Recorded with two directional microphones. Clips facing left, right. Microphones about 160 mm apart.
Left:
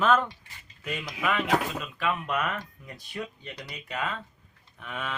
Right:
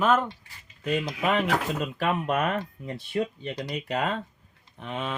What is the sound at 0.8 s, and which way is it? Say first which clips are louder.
Speech: right 5 dB; 30° right (ahead or behind).